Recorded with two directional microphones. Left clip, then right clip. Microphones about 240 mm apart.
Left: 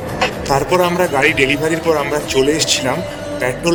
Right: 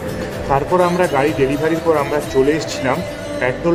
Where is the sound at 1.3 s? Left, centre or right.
Left.